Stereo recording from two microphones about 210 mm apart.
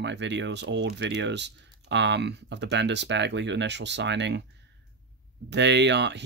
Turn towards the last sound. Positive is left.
turn(degrees=-55)  # may be behind; listen again after turning